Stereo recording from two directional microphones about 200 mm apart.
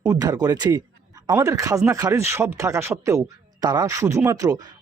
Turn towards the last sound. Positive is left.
turn(degrees=-15)  # may be behind; listen again after turning